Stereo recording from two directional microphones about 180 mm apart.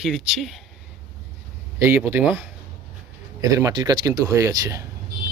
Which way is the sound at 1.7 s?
15° right (ahead or behind).